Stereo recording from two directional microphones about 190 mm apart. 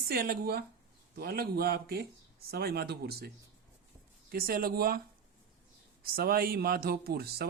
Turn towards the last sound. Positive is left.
turn(degrees=-55)  # may be behind; listen again after turning